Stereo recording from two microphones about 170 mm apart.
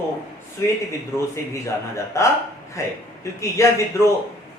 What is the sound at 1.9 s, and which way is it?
Speech, 15° left (ahead or behind).